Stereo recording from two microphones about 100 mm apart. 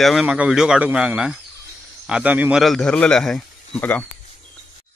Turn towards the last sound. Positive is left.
turn(degrees=20)  # may be behind; listen again after turning